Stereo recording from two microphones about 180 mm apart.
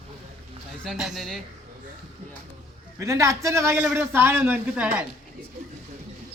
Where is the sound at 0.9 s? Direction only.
Centre (ahead or behind).